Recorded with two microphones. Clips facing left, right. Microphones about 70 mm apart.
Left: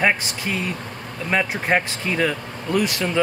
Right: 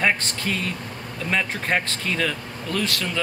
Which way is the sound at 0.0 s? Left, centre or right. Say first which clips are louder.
Left 2 dB; centre.